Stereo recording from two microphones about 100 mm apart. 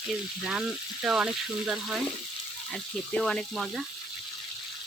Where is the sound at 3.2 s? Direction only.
5° left (ahead or behind).